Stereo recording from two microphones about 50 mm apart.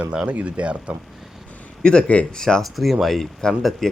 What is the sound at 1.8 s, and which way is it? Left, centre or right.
Speech, centre.